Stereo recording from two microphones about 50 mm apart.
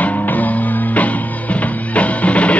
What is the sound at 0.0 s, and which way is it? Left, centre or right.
Music, left.